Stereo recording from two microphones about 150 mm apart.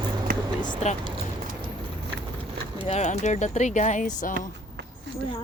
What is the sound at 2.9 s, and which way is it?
Speech, 50° left (ahead or behind).